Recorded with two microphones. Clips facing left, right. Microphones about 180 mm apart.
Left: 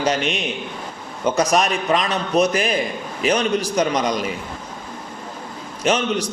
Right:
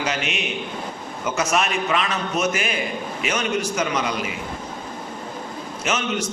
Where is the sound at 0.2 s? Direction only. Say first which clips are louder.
Left 4 dB; 5° right (ahead or behind).